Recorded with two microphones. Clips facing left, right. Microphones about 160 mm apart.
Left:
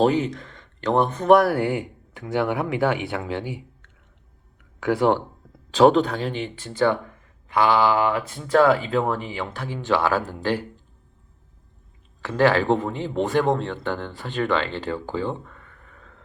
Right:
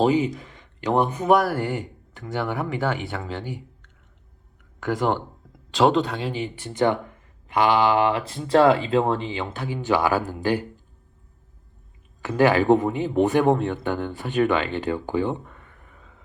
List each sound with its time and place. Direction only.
0.0 s speech: 10° right (ahead or behind)
1.6 s speech: 10° left (ahead or behind)
4.9 s speech: 5° left (ahead or behind); by 7.0 s 20° right (ahead or behind)
7.5 s mantra: 20° right (ahead or behind)
8.4 s speech: 30° right (ahead or behind); by 10.6 s 15° right (ahead or behind)
12.2 s speech: 15° right (ahead or behind)